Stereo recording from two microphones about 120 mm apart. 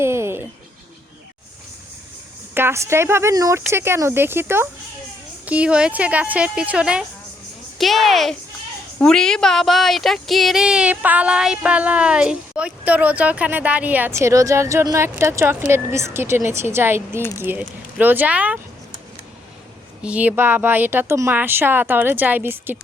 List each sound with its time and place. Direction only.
0.0 s a sound: 20° right (ahead or behind)
2.6 s a woman's voice: 20° right (ahead or behind)
20.0 s speech: 10° right (ahead or behind)